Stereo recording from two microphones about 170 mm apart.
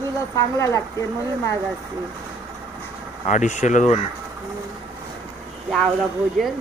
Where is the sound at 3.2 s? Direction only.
45° left (ahead or behind).